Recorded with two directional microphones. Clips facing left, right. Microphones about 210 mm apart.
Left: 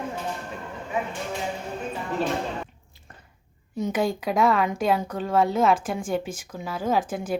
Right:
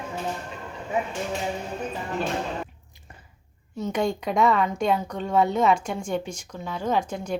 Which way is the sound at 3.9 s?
Centre (ahead or behind).